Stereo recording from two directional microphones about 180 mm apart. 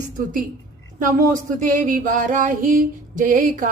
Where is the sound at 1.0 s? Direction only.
45° right (ahead or behind).